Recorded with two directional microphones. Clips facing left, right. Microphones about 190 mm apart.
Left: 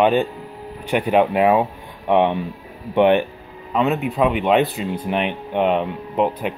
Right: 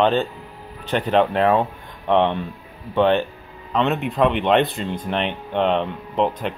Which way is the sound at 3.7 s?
5° left (ahead or behind).